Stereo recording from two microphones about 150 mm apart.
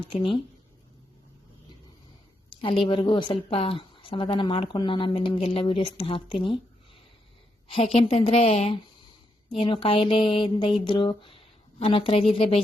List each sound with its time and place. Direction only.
0.2 s speech: 35° left (ahead or behind)
2.5 s a woman's voice: 35° left (ahead or behind)
9.5 s a woman's voice: 35° left (ahead or behind)